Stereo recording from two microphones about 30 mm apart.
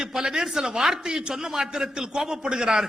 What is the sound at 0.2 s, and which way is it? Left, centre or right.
A man's voice, centre.